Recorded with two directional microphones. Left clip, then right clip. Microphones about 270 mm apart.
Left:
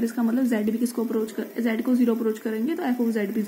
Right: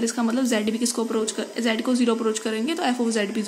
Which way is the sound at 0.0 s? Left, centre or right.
Centre.